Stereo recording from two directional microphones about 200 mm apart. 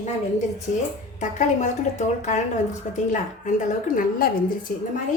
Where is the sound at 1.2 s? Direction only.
35° left (ahead or behind).